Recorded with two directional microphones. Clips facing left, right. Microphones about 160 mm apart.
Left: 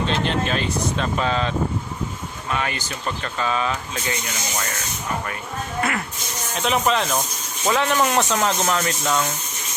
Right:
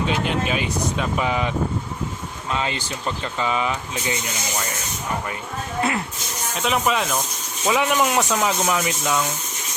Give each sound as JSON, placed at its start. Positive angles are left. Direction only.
{"t": 0.1, "sound": "speech", "side_deg": -10}
{"t": 6.6, "sound": "speech", "side_deg": 0}